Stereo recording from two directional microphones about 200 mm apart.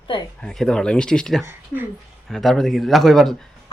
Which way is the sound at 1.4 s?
10° right (ahead or behind).